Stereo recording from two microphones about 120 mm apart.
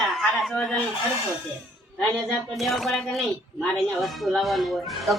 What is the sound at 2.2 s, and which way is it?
A man's voice, centre (ahead or behind).